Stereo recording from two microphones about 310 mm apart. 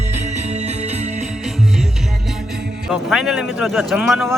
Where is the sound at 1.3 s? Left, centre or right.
Centre.